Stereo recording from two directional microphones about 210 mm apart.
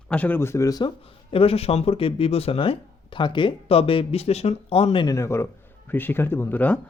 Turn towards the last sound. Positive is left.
turn(degrees=10)  # may be behind; listen again after turning